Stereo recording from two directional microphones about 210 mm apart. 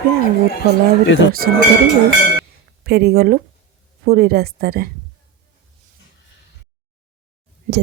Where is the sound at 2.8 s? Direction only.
50° right (ahead or behind).